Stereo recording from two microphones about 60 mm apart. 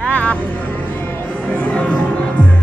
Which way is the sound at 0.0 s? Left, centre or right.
Left.